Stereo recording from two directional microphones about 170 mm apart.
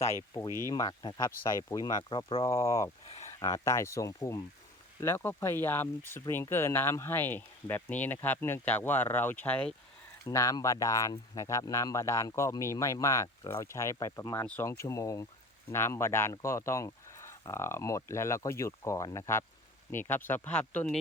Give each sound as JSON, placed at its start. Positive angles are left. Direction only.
{"t": 0.7, "sound": "speech", "side_deg": 25}
{"t": 10.2, "sound": "speech", "side_deg": 20}
{"t": 14.7, "sound": "speech", "side_deg": 20}